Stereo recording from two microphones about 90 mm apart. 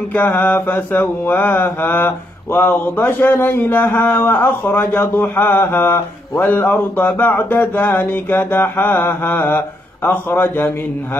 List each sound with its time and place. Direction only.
0.1 s mantra: 20° left (ahead or behind)